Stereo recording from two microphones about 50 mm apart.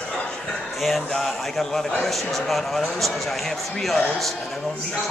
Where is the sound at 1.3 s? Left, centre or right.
Centre.